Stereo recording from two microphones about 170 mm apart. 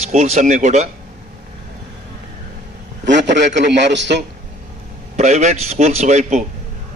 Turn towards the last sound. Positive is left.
turn(degrees=-40)  # may be behind; listen again after turning